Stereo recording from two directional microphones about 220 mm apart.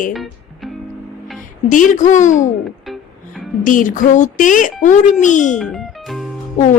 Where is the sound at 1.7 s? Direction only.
35° left (ahead or behind).